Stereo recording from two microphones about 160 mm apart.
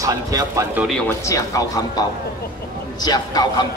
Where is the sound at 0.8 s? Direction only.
5° left (ahead or behind).